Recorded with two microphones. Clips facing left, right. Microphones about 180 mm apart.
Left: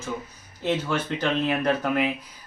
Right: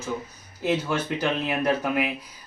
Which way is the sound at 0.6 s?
10° right (ahead or behind).